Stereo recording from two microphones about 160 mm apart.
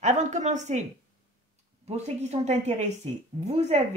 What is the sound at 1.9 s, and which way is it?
A woman's voice, 40° right (ahead or behind).